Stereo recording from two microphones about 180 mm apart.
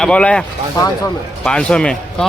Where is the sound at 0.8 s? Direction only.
20° left (ahead or behind).